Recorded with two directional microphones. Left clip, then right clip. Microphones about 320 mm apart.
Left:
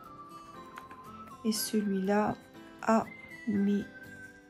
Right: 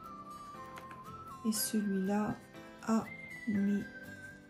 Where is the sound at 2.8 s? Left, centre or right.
Left.